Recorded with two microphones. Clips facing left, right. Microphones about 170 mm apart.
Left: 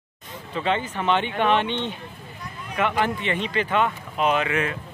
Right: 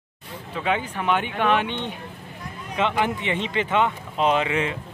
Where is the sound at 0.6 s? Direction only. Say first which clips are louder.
Left 1 dB; 10° right (ahead or behind); by 4.7 s 25° right (ahead or behind).